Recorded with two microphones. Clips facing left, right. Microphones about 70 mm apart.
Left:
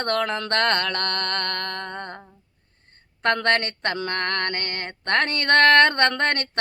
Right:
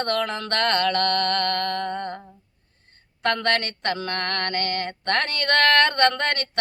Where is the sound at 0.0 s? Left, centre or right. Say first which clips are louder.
Left 1 dB; left.